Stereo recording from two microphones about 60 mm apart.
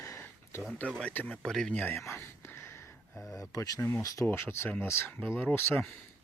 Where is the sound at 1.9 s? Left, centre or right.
Left.